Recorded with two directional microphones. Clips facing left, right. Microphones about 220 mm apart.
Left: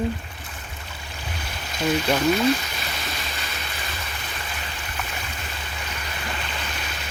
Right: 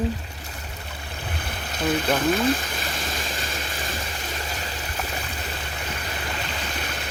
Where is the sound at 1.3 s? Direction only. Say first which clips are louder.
Even; 55° right (ahead or behind); by 4.7 s 40° right (ahead or behind).